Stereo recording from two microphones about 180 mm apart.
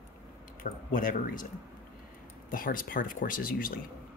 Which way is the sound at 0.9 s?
50° left (ahead or behind).